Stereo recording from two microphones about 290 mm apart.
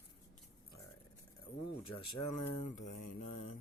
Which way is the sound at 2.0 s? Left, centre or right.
Left.